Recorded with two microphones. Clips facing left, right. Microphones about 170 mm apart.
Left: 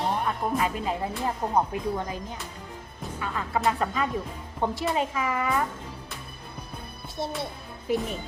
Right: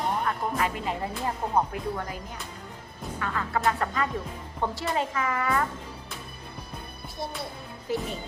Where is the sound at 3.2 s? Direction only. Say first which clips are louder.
Even; 15° left (ahead or behind).